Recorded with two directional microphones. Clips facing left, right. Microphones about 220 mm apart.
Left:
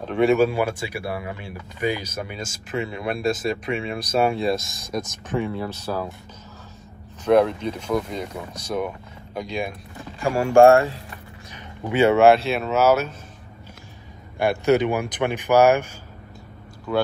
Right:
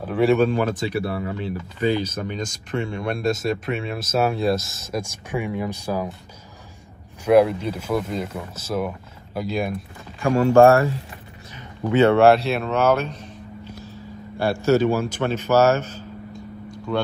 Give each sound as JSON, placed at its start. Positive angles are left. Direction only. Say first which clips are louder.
{"t": 0.0, "sound": "speech", "louder": "even", "side_deg": 0}
{"t": 4.9, "sound": "speech", "louder": "left 1 dB", "side_deg": -10}
{"t": 7.2, "sound": "speech", "louder": "right 2 dB", "side_deg": -5}
{"t": 11.9, "sound": "speech", "louder": "right 1 dB", "side_deg": 10}
{"t": 14.4, "sound": "speech", "louder": "even", "side_deg": 20}
{"t": 16.9, "sound": "speech", "louder": "left 2 dB", "side_deg": 5}